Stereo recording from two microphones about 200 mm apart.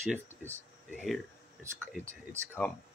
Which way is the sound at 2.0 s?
15° right (ahead or behind).